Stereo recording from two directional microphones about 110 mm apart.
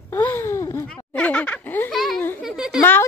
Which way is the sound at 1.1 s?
10° left (ahead or behind).